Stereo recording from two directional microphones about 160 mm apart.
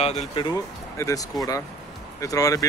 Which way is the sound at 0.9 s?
20° left (ahead or behind).